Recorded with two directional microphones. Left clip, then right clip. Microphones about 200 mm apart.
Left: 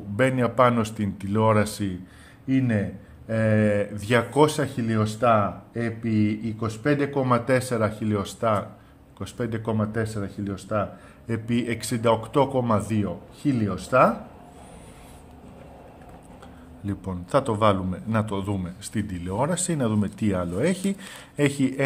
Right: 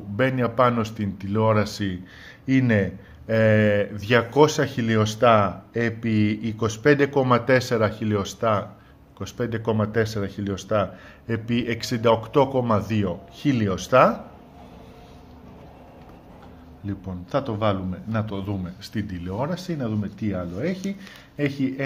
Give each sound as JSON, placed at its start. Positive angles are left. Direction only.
{"t": 0.2, "sound": "speech", "side_deg": 5}
{"t": 2.4, "sound": "speech", "side_deg": -20}
{"t": 16.8, "sound": "a man's voice", "side_deg": 15}